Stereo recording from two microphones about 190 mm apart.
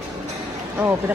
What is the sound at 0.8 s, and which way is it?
Speech, 10° right (ahead or behind).